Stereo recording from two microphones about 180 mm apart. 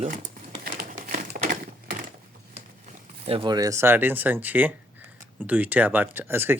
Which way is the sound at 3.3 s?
30° right (ahead or behind).